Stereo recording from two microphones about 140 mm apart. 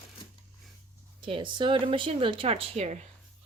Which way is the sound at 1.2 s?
35° right (ahead or behind).